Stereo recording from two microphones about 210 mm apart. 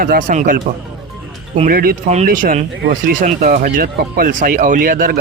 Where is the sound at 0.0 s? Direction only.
40° right (ahead or behind).